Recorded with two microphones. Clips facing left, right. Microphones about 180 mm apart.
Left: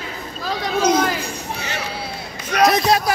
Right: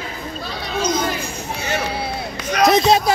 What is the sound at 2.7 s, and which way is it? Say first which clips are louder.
Speech: right 7 dB; 25° right (ahead or behind).